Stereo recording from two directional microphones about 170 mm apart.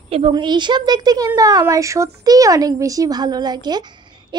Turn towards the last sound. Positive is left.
turn(degrees=-25)  # may be behind; listen again after turning